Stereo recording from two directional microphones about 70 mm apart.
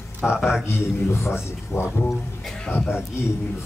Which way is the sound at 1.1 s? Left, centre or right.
Left.